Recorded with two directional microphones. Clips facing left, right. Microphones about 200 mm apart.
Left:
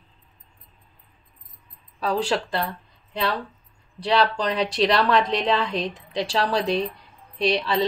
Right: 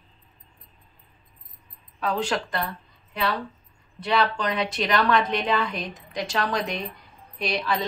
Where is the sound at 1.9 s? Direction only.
35° left (ahead or behind).